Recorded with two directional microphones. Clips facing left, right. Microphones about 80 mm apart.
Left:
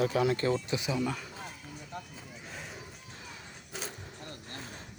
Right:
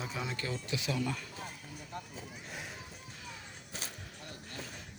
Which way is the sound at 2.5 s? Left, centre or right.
Centre.